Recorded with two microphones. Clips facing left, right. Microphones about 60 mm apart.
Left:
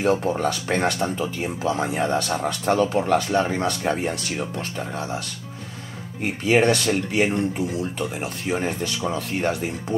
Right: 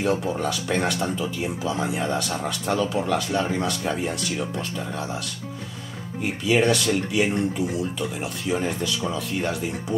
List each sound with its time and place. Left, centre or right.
0.0 s speech: left
6.2 s speech: left
7.7 s speech: left